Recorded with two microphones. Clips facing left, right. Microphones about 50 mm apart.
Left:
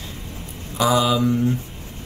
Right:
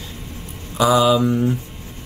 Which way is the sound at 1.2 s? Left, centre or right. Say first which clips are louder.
Right 1 dB; centre.